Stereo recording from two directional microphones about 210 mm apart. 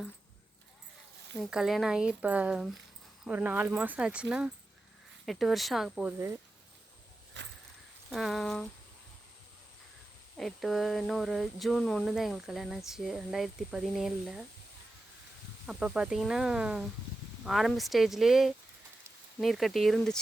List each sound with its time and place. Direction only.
1.4 s speech: centre (ahead or behind)
7.3 s a sound: 55° right (ahead or behind)
8.1 s speech: centre (ahead or behind)
10.3 s speech: centre (ahead or behind)
15.6 s speech: 5° right (ahead or behind)